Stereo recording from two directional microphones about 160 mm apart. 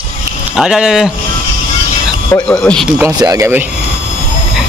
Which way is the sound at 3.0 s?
20° right (ahead or behind).